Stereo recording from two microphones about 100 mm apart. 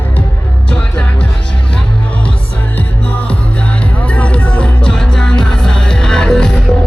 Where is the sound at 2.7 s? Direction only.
15° left (ahead or behind).